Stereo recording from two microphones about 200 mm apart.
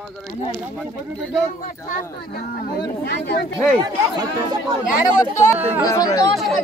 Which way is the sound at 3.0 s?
55° left (ahead or behind).